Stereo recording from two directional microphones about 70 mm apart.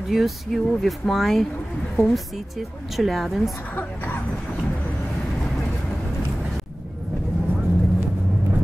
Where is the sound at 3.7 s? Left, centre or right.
Left.